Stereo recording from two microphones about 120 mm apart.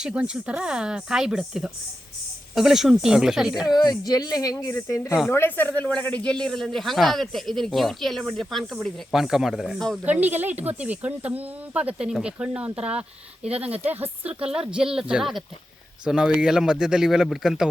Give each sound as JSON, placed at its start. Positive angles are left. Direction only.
{"t": 0.0, "sound": "speech", "side_deg": -10}
{"t": 3.8, "sound": "speech", "side_deg": 35}
{"t": 10.0, "sound": "speech", "side_deg": -15}